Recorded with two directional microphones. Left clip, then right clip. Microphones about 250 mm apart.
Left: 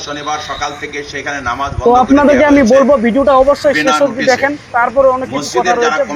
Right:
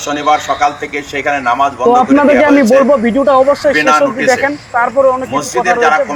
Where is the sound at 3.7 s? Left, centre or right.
Centre.